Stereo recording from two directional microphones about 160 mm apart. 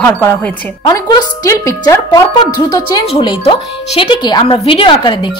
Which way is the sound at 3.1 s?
40° left (ahead or behind).